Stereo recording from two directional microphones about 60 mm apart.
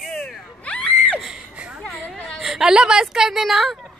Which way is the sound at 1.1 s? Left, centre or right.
Centre.